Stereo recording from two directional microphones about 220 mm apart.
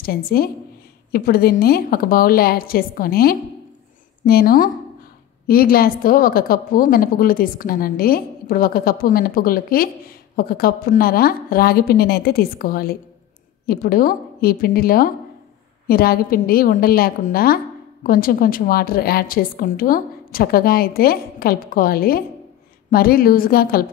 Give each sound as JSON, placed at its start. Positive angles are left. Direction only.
{"t": 0.0, "sound": "a woman's voice", "side_deg": 45}